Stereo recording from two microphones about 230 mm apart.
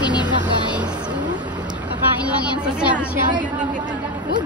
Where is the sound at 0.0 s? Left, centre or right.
Centre.